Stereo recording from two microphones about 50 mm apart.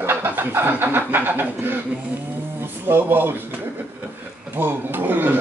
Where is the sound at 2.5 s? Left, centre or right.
Right.